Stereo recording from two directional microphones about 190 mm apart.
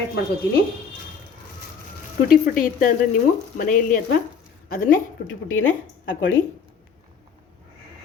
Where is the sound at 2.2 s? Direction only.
45° left (ahead or behind).